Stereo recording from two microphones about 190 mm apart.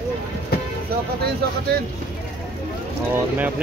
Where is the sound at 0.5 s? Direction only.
55° left (ahead or behind).